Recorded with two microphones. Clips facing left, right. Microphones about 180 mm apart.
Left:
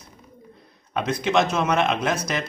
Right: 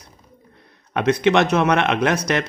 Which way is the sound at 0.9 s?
65° right (ahead or behind).